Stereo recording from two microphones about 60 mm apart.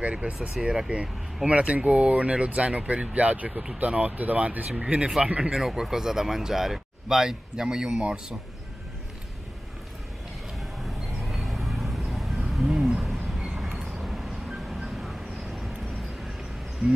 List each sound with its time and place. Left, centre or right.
0.0 s speech: right
10.9 s vehicle: centre
12.5 s a sound: centre
13.5 s vehicle: centre